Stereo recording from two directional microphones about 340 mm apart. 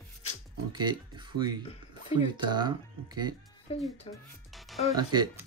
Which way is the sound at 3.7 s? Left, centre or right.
Centre.